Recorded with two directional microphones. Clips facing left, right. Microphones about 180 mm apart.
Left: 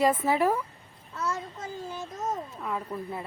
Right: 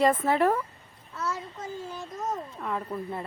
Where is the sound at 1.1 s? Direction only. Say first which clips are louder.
Left 1 dB; 5° right (ahead or behind).